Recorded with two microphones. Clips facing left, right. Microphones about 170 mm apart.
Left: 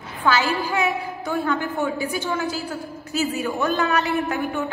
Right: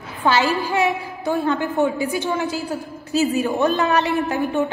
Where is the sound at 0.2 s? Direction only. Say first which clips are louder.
Right 2 dB; 25° right (ahead or behind).